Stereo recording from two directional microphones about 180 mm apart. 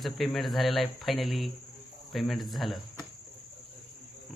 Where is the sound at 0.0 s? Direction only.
Centre (ahead or behind).